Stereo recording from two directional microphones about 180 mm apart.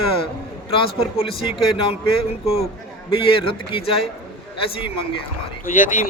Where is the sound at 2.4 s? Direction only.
35° left (ahead or behind).